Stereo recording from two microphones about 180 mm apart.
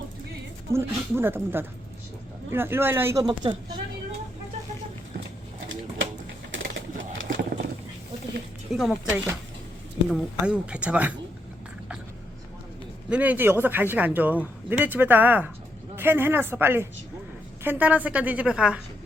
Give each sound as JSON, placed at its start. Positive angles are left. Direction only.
{"t": 0.7, "sound": "speech", "side_deg": -15}
{"t": 3.2, "sound": "speech", "side_deg": -25}
{"t": 7.2, "sound": "a sound", "side_deg": -90}
{"t": 8.7, "sound": "speech", "side_deg": 0}
{"t": 13.1, "sound": "speech", "side_deg": -10}